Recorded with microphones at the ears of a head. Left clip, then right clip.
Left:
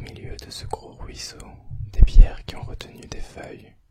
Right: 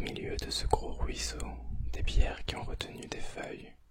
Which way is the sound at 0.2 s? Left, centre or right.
Centre.